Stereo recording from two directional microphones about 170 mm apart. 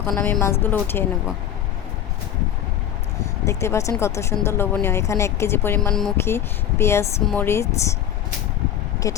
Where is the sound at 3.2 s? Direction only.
15° left (ahead or behind).